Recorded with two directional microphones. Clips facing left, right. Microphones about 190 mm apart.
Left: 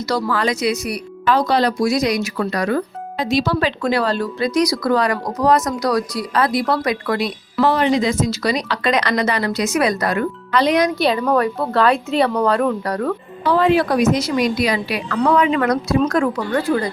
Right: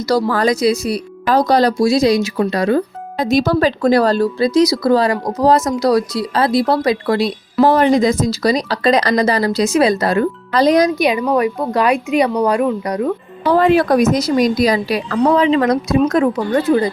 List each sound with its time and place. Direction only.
0.1 s speech: 35° right (ahead or behind)
1.8 s speech: 30° right (ahead or behind)
3.2 s speech: 45° right (ahead or behind)
7.7 s speech: 45° right (ahead or behind)
10.9 s speech: 15° right (ahead or behind)
13.4 s speech: 45° right (ahead or behind); by 16.9 s 20° right (ahead or behind)